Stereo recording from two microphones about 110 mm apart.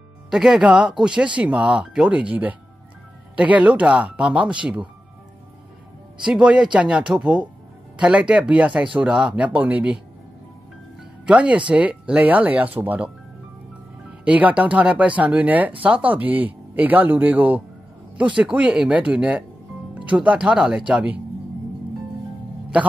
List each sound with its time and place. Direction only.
0.3 s speech: 5° right (ahead or behind)
6.2 s speech: 10° right (ahead or behind)
11.2 s speech: 10° right (ahead or behind)
14.2 s speech: 10° right (ahead or behind)